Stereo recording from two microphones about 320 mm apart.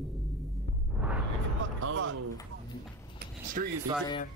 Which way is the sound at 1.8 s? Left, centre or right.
Right.